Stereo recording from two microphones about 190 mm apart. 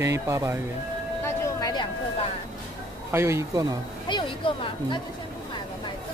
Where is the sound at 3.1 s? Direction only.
15° right (ahead or behind).